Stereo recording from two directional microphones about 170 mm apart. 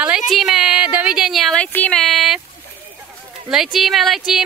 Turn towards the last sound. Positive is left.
turn(degrees=0)  # may be behind; listen again after turning